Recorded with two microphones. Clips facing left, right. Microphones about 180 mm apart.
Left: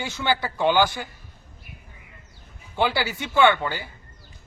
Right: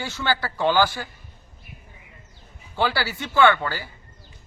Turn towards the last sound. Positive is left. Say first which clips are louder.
# even
turn(degrees=20)  # may be behind; listen again after turning